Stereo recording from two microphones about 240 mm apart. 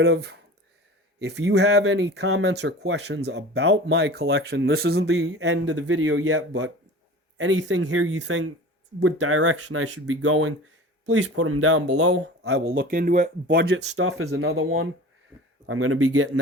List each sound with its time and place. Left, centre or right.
0.0 s speech: right
5.8 s speech: right
12.4 s speech: right